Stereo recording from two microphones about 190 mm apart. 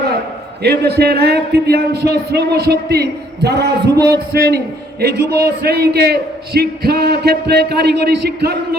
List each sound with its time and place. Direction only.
0.6 s a man's voice: 60° right (ahead or behind)